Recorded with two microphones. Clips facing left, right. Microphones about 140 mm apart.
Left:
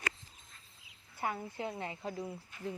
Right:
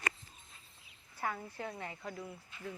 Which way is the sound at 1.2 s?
20° left (ahead or behind).